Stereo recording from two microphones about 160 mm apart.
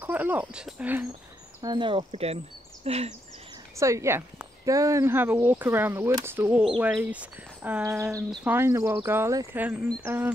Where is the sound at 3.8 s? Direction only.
20° right (ahead or behind).